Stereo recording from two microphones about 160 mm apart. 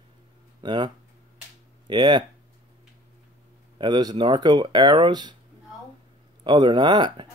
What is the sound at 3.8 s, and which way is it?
Speech, 25° right (ahead or behind).